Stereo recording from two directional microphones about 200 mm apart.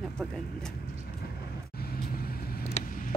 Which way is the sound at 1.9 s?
50° left (ahead or behind).